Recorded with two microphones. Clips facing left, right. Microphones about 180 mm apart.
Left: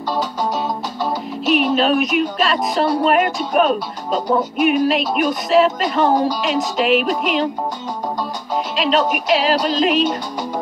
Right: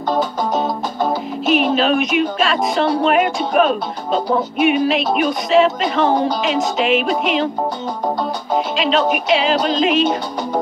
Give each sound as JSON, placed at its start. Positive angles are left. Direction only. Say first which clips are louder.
{"t": 0.1, "sound": "music", "louder": "right 3 dB", "side_deg": -50}
{"t": 1.4, "sound": "music", "louder": "right 1 dB", "side_deg": 0}
{"t": 1.8, "sound": "speech", "louder": "even", "side_deg": 0}
{"t": 8.7, "sound": "speech", "louder": "left 1 dB", "side_deg": 0}